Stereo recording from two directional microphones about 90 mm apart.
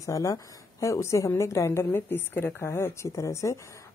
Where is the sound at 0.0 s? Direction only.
40° left (ahead or behind).